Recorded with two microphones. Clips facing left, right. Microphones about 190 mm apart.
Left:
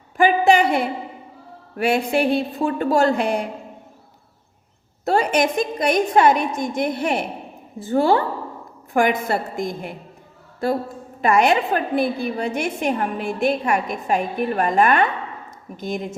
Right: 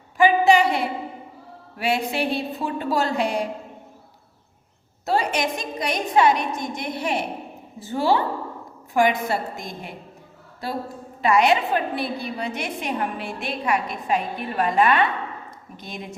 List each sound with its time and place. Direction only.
0.2 s a sound: 50° left (ahead or behind)
1.7 s a woman's voice: 50° left (ahead or behind)
5.0 s a woman's voice: 50° left (ahead or behind)
11.2 s a woman's voice: 50° left (ahead or behind)